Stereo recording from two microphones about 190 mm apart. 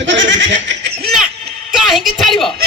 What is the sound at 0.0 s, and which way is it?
Laughter, 70° right (ahead or behind).